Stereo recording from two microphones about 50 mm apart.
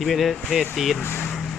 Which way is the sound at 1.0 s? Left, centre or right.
Left.